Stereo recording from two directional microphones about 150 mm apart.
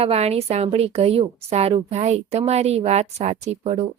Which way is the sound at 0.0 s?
45° right (ahead or behind).